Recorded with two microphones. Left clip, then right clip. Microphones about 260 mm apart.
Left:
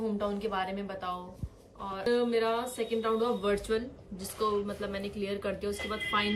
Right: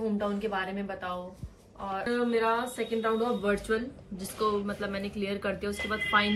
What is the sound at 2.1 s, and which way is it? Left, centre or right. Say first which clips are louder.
Speech: even; right.